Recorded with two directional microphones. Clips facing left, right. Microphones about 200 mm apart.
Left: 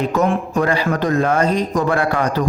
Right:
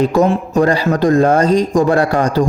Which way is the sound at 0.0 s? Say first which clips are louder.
Right 5 dB; 30° right (ahead or behind).